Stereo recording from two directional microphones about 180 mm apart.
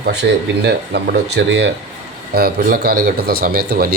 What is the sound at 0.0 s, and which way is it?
Speech, 65° right (ahead or behind).